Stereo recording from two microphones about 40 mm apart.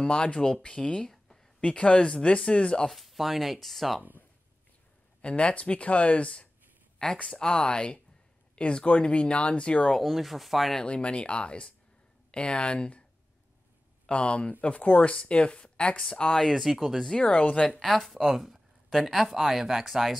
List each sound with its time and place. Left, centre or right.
0.0 s speech: left
1.0 s a sound: centre
1.6 s speech: left
2.9 s speech: centre
5.2 s speech: left
7.2 s speech: centre
9.9 s speech: centre
10.8 s speech: left
14.0 s speech: left
16.5 s speech: centre
17.2 s speech: left
17.7 s speech: centre